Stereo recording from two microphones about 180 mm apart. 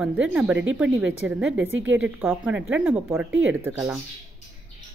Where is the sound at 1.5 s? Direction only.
90° right.